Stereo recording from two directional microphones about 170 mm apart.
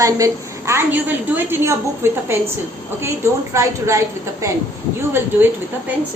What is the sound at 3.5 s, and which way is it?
Speech, 15° right (ahead or behind).